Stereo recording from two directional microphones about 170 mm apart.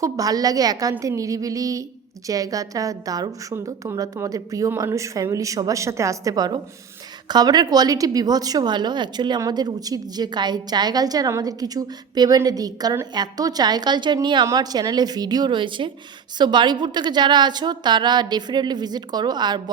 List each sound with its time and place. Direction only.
0.0 s a woman's voice: 20° right (ahead or behind)